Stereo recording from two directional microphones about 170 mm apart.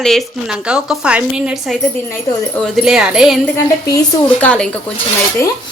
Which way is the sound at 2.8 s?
5° right (ahead or behind).